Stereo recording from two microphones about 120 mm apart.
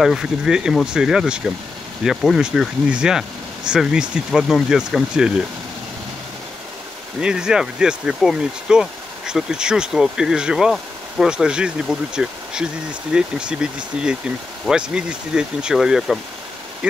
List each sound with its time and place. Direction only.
0.0 s speech: 5° right (ahead or behind)
7.2 s speech: 5° right (ahead or behind)